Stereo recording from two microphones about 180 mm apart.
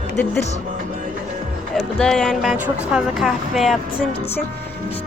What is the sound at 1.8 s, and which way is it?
Speech, 5° left (ahead or behind).